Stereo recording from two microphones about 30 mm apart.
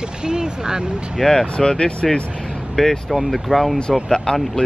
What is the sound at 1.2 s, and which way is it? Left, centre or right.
Speech, centre.